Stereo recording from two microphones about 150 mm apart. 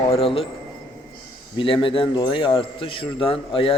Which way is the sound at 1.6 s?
35° left (ahead or behind).